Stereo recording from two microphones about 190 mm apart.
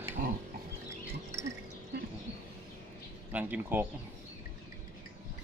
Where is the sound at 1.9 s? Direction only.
55° right (ahead or behind).